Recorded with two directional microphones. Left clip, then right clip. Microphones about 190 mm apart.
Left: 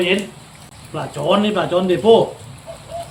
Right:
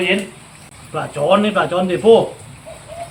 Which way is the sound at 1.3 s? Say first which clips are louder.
Right 1 dB; 10° right (ahead or behind).